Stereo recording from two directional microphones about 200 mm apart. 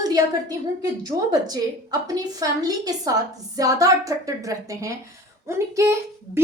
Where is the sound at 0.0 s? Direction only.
20° right (ahead or behind).